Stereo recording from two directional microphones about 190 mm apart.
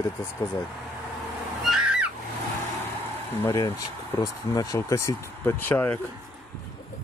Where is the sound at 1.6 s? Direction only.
5° right (ahead or behind).